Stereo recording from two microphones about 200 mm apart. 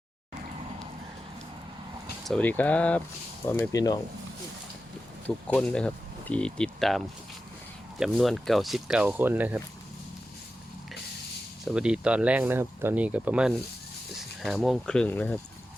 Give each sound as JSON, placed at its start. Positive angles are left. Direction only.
{"t": 2.2, "sound": "speech", "side_deg": 5}
{"t": 5.5, "sound": "speech", "side_deg": 5}
{"t": 11.6, "sound": "speech", "side_deg": -5}